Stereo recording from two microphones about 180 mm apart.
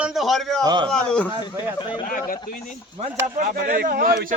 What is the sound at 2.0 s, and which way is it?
Speech, 50° left (ahead or behind).